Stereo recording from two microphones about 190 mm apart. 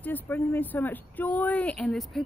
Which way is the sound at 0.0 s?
10° left (ahead or behind).